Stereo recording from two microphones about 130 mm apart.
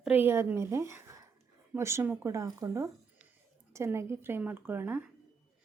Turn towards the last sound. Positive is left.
turn(degrees=-15)  # may be behind; listen again after turning